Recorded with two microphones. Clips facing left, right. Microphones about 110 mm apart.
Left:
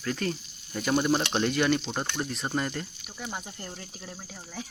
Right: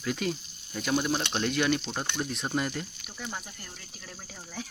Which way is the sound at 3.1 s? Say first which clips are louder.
Left 1 dB; 15° left (ahead or behind).